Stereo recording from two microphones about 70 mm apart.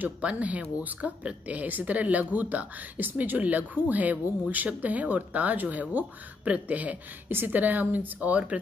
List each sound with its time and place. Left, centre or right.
0.0 s speech: centre